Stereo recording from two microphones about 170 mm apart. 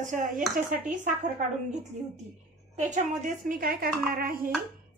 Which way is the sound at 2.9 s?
45° right (ahead or behind).